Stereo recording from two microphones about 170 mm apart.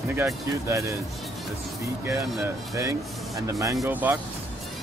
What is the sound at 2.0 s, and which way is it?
Speech, 15° right (ahead or behind).